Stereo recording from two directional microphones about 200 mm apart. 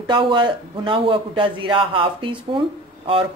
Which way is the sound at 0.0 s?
25° right (ahead or behind).